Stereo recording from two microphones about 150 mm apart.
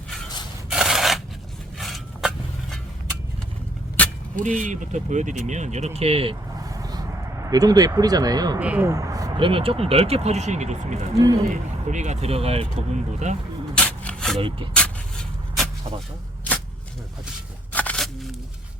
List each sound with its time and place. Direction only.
0.7 s a sound: 5° right (ahead or behind)
3.9 s vehicle: 10° left (ahead or behind)
4.4 s speech: 55° right (ahead or behind); by 6.3 s 40° right (ahead or behind)
6.6 s vehicle: 25° right (ahead or behind)
8.5 s speech: 10° right (ahead or behind)
9.5 s speech: 35° right (ahead or behind)
11.1 s speech: 25° right (ahead or behind)
11.4 s speech: 50° right (ahead or behind)
13.7 s rub: 10° left (ahead or behind)
14.3 s speech: 35° right (ahead or behind)
14.7 s a sound: 5° left (ahead or behind)
17.7 s a sound: 10° left (ahead or behind)